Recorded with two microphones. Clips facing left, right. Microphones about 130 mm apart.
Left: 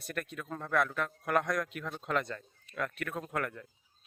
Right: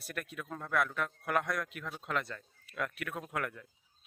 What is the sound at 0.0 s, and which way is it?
A man's voice, 5° right (ahead or behind).